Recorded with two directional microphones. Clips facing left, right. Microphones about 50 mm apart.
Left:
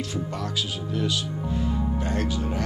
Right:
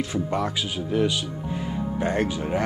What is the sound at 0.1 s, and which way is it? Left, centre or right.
Speech, right.